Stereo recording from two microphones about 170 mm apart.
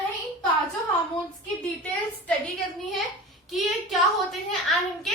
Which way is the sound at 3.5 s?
Centre (ahead or behind).